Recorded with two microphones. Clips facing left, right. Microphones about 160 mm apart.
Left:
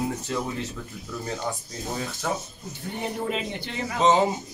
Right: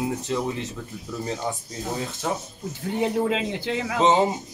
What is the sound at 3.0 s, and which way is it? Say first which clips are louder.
Speech: right 6 dB; 90° right.